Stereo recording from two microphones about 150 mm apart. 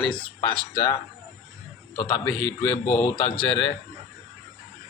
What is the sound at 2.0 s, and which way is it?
A man's voice, 30° left (ahead or behind).